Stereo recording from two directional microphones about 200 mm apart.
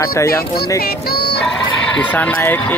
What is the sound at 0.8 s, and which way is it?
Music, 50° left (ahead or behind).